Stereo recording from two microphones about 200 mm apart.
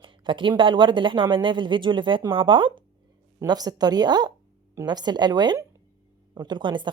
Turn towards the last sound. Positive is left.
turn(degrees=-25)  # may be behind; listen again after turning